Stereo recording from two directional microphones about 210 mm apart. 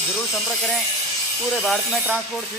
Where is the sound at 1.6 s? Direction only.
5° right (ahead or behind).